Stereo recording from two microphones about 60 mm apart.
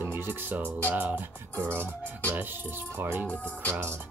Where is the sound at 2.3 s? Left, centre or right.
Right.